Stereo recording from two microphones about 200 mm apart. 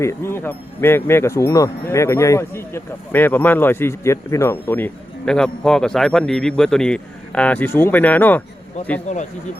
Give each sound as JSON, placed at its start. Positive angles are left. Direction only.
{"t": 0.0, "sound": "speech", "side_deg": 15}
{"t": 9.1, "sound": "speech", "side_deg": 35}